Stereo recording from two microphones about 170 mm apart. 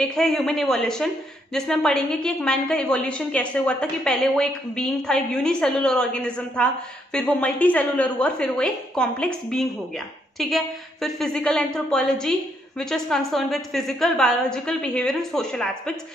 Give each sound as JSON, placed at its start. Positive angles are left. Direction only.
{"t": 0.0, "sound": "speech", "side_deg": 5}